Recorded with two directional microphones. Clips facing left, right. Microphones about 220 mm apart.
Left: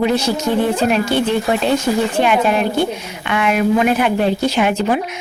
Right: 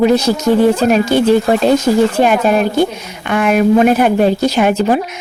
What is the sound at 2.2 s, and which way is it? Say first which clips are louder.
A woman's voice: right 3 dB; 40° right (ahead or behind).